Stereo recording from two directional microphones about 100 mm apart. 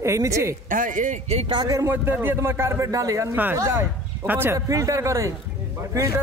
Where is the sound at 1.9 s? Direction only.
20° right (ahead or behind).